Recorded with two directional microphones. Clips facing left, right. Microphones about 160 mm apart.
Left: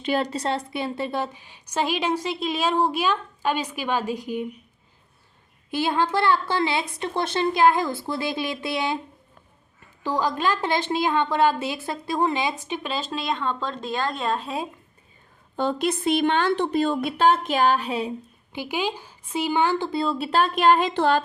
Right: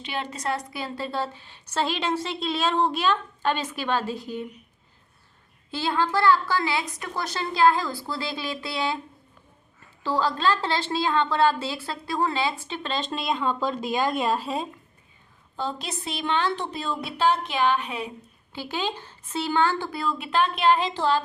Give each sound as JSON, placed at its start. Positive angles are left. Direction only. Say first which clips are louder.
{"t": 0.0, "sound": "a woman's voice", "louder": "left 6 dB", "side_deg": 40}
{"t": 5.7, "sound": "a woman's voice", "louder": "left 2 dB", "side_deg": 20}
{"t": 10.0, "sound": "a woman's voice", "louder": "even", "side_deg": 15}
{"t": 15.5, "sound": "a woman's voice", "louder": "left 7 dB", "side_deg": 55}
{"t": 18.5, "sound": "a woman's voice", "louder": "left 3 dB", "side_deg": 15}